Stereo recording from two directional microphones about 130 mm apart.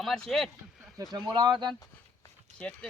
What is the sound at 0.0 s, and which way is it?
Speech, centre (ahead or behind).